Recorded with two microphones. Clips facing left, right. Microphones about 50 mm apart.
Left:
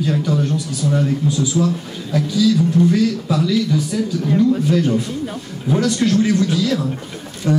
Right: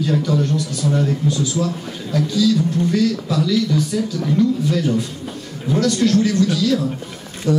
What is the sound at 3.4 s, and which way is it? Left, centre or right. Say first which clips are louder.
Speech: right 1 dB; left.